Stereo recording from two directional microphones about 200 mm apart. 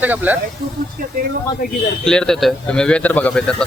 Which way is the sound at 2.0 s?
5° left (ahead or behind).